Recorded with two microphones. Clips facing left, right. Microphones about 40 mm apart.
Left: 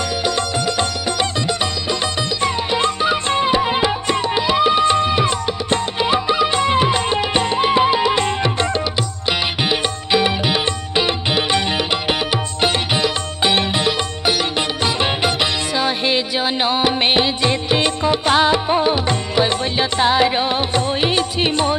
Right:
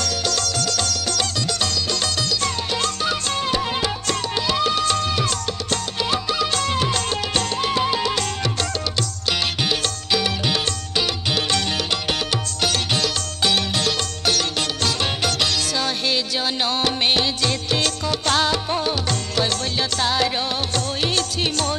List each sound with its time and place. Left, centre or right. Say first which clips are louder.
0.2 s music: left 4 dB; left
2.4 s music: left 5 dB; left